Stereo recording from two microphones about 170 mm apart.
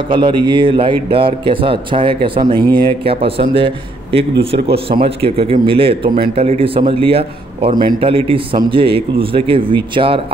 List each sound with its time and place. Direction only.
0.1 s a man's voice: 30° right (ahead or behind)